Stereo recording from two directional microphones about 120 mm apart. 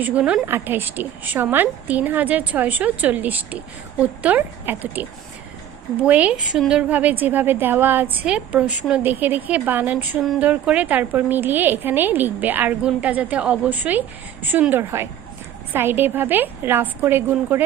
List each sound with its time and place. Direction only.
0.0 s a woman's voice: 10° right (ahead or behind)